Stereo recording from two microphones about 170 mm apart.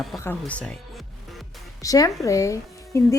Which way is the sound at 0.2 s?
10° left (ahead or behind).